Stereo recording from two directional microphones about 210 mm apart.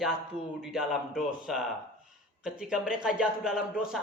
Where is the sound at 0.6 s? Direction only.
5° right (ahead or behind).